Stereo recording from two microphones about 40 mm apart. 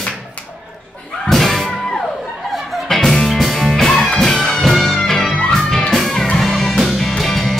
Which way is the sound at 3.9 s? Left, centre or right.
Centre.